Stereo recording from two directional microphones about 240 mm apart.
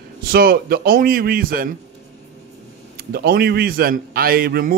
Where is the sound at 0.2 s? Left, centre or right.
Right.